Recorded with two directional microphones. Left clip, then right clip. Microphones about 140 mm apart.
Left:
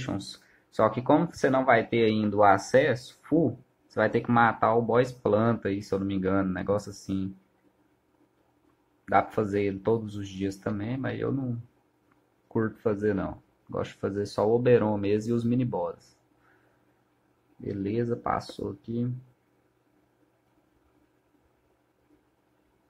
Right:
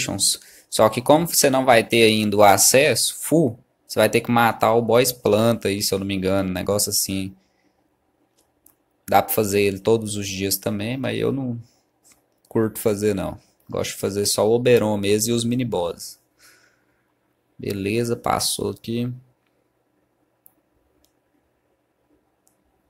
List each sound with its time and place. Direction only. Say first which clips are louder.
0.0 s speech: right 13 dB; 30° right (ahead or behind)
9.0 s speech: right 6 dB; 35° right (ahead or behind)
12.5 s speech: right 7 dB; 35° right (ahead or behind)
17.6 s speech: right 7 dB; 35° right (ahead or behind)